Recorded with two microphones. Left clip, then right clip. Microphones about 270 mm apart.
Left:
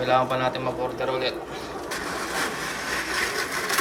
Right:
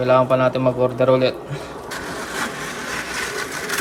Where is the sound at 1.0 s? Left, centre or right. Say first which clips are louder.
Right 12 dB; centre.